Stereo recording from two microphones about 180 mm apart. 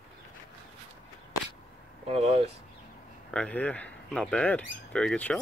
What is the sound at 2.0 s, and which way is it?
Speech, 35° right (ahead or behind).